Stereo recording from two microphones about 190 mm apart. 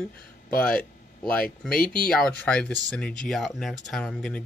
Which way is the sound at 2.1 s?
5° left (ahead or behind).